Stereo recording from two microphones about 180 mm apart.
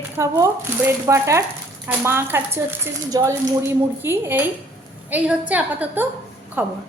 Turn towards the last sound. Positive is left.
turn(degrees=-10)  # may be behind; listen again after turning